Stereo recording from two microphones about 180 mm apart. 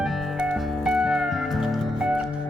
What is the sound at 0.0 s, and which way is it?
Music, centre (ahead or behind).